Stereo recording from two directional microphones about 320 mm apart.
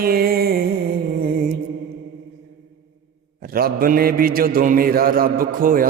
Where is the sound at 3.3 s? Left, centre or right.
Right.